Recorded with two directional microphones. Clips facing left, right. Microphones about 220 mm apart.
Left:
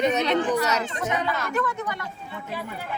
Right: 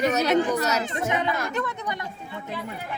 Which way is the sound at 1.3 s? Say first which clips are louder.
Left 2 dB; 15° right (ahead or behind).